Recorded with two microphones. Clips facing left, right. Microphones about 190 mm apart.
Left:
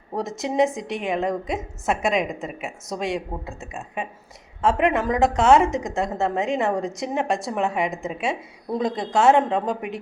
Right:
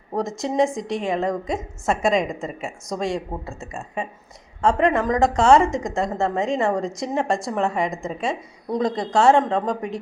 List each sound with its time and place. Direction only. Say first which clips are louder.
0.1 s a woman's voice: right 2 dB; centre (ahead or behind)